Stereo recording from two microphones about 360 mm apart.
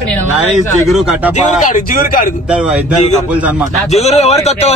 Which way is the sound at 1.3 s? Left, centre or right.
Left.